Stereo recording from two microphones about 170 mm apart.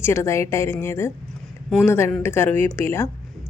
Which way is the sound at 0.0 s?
15° left (ahead or behind).